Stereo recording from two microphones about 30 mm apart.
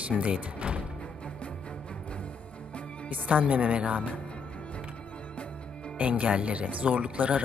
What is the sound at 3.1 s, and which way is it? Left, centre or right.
Speech, right.